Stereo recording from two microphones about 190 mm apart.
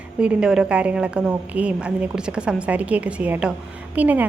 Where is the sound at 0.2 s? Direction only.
5° right (ahead or behind).